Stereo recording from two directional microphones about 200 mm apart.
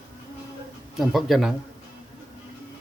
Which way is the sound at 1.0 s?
Centre (ahead or behind).